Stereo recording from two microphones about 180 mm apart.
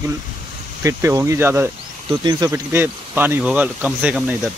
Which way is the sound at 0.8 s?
15° right (ahead or behind).